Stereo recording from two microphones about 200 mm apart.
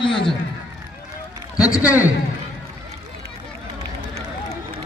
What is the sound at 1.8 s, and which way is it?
Speech, 5° right (ahead or behind).